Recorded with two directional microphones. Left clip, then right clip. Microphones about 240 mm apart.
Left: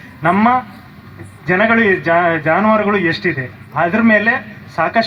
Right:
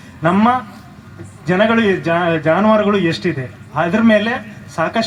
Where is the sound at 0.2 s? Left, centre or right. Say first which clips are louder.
Left 2 dB; right.